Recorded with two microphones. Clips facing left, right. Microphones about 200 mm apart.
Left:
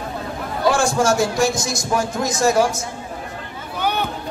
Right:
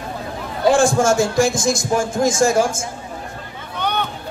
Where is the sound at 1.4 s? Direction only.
50° right (ahead or behind).